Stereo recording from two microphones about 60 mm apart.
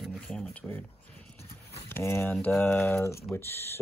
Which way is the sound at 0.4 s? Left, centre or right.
Left.